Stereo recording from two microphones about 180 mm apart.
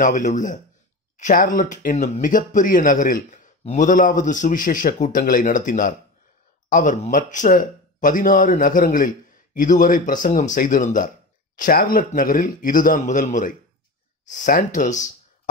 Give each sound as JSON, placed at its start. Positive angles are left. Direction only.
{"t": 0.0, "sound": "speech", "side_deg": 45}